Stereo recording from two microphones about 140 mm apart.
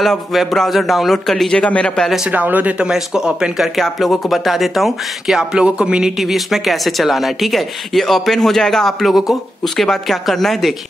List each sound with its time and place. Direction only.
0.0 s speech: centre (ahead or behind)
2.3 s speech: 10° right (ahead or behind)